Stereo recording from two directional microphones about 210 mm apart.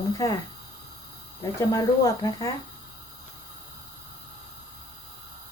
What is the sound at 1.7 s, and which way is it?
Speech, 15° left (ahead or behind).